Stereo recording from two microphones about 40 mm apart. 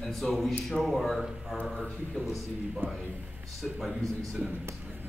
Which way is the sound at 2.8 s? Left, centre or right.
Right.